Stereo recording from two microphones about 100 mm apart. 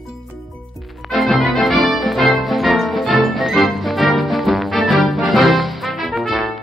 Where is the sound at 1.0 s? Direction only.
Centre (ahead or behind).